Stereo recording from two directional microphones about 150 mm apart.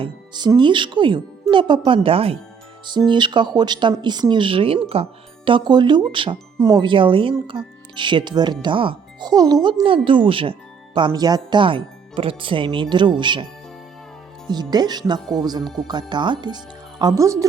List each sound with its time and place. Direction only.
0.0 s speech: 30° right (ahead or behind)